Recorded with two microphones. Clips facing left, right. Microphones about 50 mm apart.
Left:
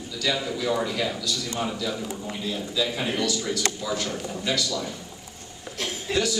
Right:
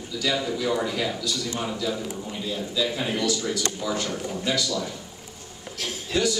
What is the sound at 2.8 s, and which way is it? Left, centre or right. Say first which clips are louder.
Speech: even; centre.